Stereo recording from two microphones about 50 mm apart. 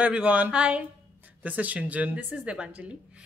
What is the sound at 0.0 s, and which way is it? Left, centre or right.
Speech, right.